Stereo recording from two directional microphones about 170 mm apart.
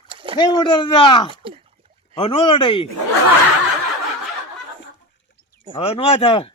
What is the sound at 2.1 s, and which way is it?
Speech, 30° left (ahead or behind).